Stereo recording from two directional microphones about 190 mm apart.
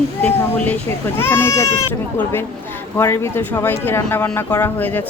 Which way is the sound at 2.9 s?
15° left (ahead or behind).